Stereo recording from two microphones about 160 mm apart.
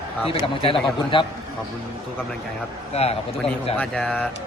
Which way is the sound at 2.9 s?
40° left (ahead or behind).